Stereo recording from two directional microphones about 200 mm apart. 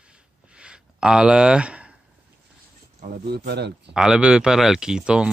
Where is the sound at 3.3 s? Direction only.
55° right (ahead or behind).